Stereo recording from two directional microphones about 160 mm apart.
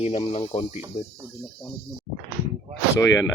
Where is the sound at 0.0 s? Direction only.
40° left (ahead or behind).